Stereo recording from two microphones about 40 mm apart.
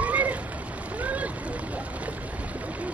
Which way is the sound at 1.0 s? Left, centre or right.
Right.